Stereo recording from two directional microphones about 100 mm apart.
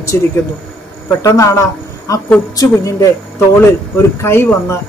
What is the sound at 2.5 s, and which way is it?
Speech, 35° left (ahead or behind).